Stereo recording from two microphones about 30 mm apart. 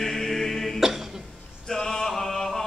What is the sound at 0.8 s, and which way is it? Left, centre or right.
Cough, centre.